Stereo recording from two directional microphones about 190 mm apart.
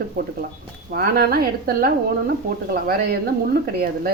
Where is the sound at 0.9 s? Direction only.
50° right (ahead or behind).